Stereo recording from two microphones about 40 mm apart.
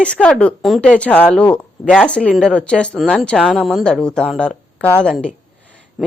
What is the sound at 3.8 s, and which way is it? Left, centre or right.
A woman's voice, centre.